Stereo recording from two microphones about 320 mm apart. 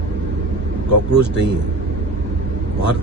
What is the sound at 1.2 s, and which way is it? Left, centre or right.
Speech, right.